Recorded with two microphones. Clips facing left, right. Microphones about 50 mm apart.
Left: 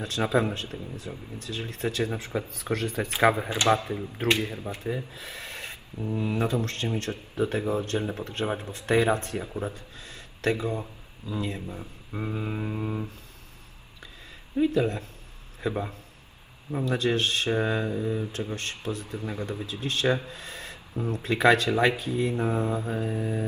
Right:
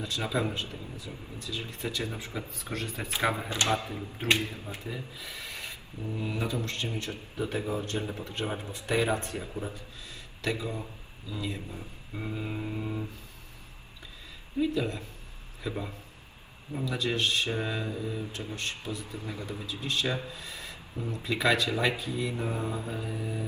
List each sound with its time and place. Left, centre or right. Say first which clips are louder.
0.0 s speech: left 5 dB; left
3.1 s speech: left 6 dB; left
12.1 s a sound: left 4 dB; centre
14.6 s speech: left 5 dB; left
16.8 s speech: left 4 dB; left